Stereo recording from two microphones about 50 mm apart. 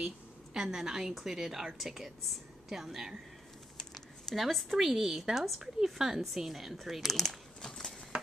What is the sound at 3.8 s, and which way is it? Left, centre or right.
Speech, centre.